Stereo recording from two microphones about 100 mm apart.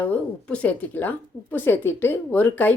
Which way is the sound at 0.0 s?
15° left (ahead or behind).